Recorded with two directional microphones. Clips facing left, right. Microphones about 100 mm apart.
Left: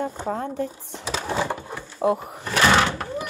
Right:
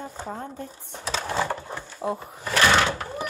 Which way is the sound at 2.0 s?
75° left (ahead or behind).